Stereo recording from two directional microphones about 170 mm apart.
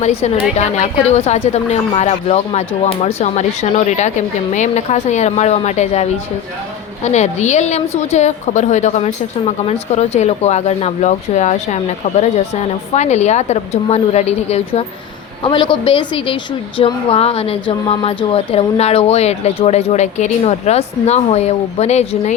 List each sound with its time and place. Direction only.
0.0 s a woman's voice: 35° left (ahead or behind)